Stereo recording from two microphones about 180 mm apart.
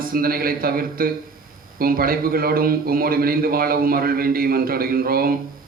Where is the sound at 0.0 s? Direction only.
55° right (ahead or behind).